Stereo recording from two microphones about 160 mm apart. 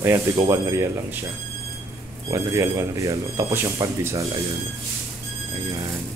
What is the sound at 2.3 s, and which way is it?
Speech, 20° right (ahead or behind).